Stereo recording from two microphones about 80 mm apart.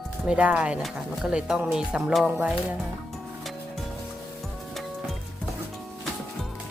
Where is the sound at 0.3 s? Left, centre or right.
Centre.